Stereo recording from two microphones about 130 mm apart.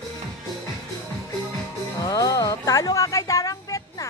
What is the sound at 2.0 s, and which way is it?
Music, 30° left (ahead or behind).